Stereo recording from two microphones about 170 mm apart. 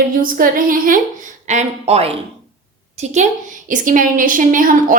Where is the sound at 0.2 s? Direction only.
55° right (ahead or behind).